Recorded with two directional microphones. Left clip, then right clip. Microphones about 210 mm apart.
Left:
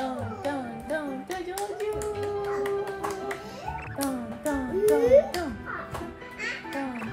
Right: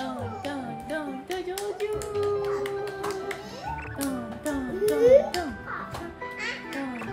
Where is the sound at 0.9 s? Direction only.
20° left (ahead or behind).